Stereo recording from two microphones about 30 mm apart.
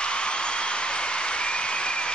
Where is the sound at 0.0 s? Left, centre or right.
Left.